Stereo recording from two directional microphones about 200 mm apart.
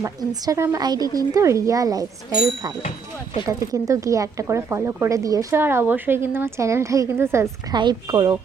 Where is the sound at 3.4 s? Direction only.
15° right (ahead or behind).